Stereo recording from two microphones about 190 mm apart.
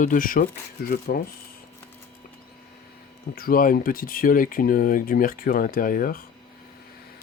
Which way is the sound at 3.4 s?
50° left (ahead or behind).